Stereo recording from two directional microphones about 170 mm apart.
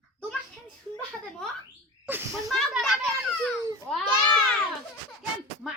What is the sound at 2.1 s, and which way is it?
Speech, 10° right (ahead or behind).